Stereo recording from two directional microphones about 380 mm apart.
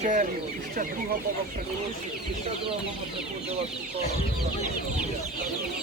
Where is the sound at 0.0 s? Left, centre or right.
Centre.